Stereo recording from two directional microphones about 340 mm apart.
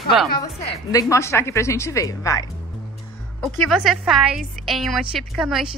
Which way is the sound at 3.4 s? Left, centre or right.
Centre.